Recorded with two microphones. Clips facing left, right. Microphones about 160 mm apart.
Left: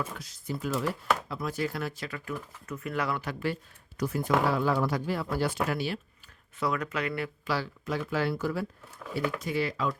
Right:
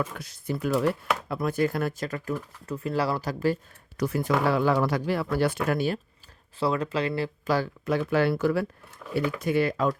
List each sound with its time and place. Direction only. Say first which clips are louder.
0.0 s speech: right 5 dB; 60° right (ahead or behind); by 3.6 s 40° right (ahead or behind)
3.9 s speech: right 2 dB; 70° right (ahead or behind); by 6.0 s 50° right (ahead or behind)
6.6 s speech: right 4 dB; 30° right (ahead or behind)
7.4 s speech: right 7 dB; 50° right (ahead or behind); by 8.6 s 70° right (ahead or behind)
9.1 s speech: right 5 dB; 60° right (ahead or behind)